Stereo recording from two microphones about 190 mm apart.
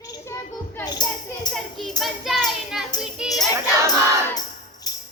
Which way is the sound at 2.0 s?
Centre (ahead or behind).